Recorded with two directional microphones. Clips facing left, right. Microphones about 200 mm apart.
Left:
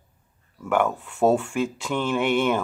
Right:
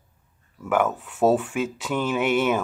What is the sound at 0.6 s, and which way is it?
Speech, 5° right (ahead or behind).